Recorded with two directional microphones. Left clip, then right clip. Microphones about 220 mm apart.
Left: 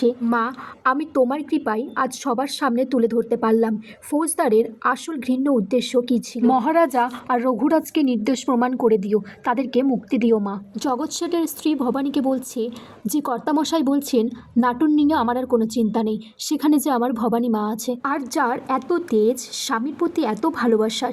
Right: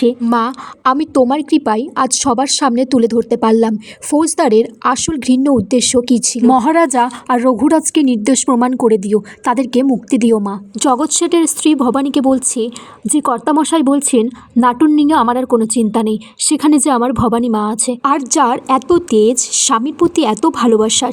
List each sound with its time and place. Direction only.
0.2 s a woman's voice: 40° right (ahead or behind)